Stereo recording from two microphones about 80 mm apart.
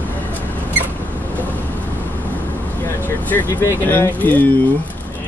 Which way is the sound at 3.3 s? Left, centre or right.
Left.